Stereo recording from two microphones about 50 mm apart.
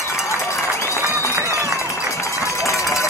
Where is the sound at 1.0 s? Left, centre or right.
Left.